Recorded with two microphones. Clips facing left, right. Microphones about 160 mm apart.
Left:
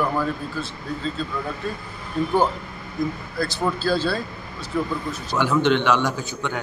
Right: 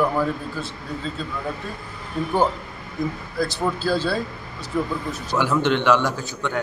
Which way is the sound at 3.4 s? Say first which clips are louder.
Right 1 dB; 15° right (ahead or behind).